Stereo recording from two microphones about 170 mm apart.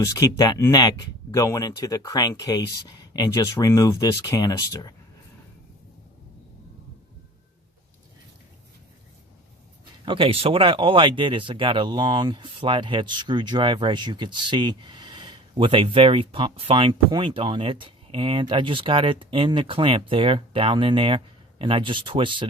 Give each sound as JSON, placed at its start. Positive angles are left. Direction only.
{"t": 0.0, "sound": "speech", "side_deg": 20}
{"t": 10.1, "sound": "speech", "side_deg": -30}